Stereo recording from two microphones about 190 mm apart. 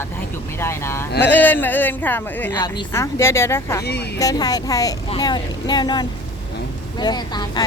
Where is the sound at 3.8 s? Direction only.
60° left (ahead or behind).